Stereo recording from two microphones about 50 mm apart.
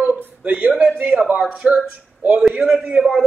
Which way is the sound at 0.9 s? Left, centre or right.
Right.